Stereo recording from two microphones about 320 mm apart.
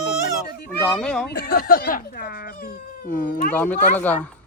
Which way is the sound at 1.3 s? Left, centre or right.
Left.